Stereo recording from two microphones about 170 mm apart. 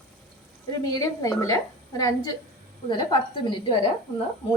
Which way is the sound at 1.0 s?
20° left (ahead or behind).